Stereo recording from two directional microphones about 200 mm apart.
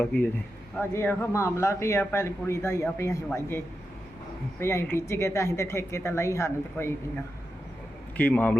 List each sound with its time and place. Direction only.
0.0 s a woman's voice: 5° left (ahead or behind)
4.6 s a woman's voice: 15° left (ahead or behind)
8.1 s speech: 10° left (ahead or behind)